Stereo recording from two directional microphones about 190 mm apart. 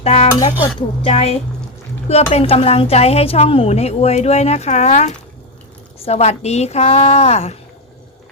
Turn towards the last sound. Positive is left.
turn(degrees=35)  # may be behind; listen again after turning